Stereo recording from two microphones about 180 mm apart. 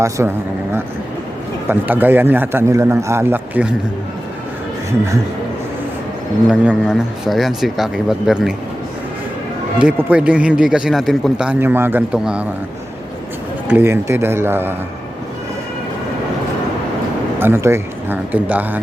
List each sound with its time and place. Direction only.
0.2 s a man's voice: 10° right (ahead or behind)
1.6 s a man's voice: 10° right (ahead or behind)
6.5 s speech: 5° right (ahead or behind)
9.7 s speech: 5° right (ahead or behind)
13.7 s a man's voice: 10° right (ahead or behind)
17.4 s a man's voice: 15° right (ahead or behind)